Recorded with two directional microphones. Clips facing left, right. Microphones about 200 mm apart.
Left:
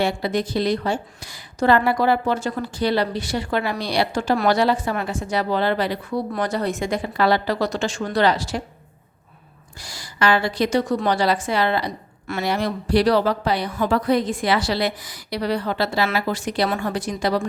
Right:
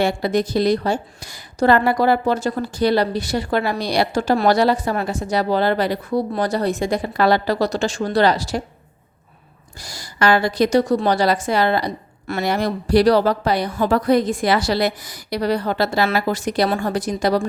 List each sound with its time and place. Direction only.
0.0 s a woman's voice: 45° right (ahead or behind)
9.8 s a woman's voice: 40° right (ahead or behind)